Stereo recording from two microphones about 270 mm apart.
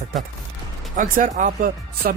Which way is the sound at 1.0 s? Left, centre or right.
Right.